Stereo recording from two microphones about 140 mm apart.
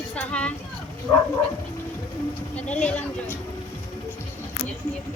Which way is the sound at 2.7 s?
10° left (ahead or behind).